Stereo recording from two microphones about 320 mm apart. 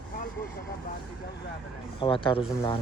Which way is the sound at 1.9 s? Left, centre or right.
Centre.